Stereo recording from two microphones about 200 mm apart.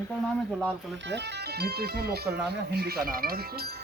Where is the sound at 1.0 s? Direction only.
60° right (ahead or behind).